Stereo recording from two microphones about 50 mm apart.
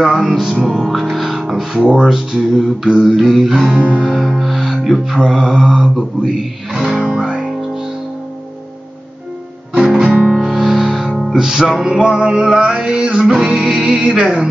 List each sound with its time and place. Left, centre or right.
0.0 s speech: centre
1.9 s music: centre
3.6 s music: right
4.0 s music: centre
7.0 s music: right
7.2 s music: centre
10.3 s music: centre